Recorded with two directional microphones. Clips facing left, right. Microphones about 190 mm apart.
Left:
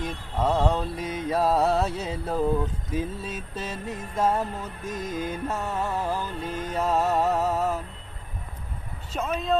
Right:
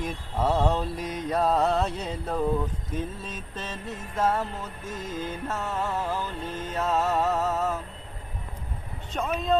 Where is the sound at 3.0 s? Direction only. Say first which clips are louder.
Left 4 dB; 10° left (ahead or behind).